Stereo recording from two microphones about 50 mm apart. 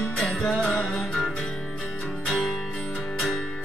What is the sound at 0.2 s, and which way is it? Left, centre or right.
Music, centre.